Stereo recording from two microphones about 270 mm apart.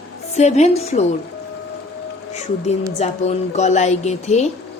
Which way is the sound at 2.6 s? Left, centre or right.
Left.